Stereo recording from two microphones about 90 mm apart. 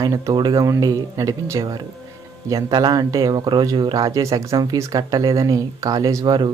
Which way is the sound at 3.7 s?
55° right (ahead or behind).